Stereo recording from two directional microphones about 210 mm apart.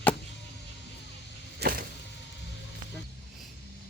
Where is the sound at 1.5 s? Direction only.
50° right (ahead or behind).